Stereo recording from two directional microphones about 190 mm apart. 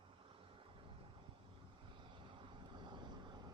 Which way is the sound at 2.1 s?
25° right (ahead or behind).